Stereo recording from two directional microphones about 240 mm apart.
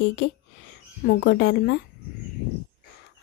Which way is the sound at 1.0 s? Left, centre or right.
Left.